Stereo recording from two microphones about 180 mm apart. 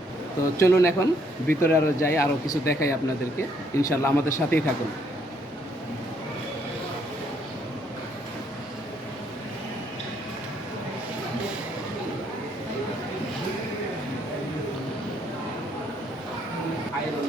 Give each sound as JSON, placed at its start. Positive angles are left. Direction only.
{"t": 0.6, "sound": "speech", "side_deg": 15}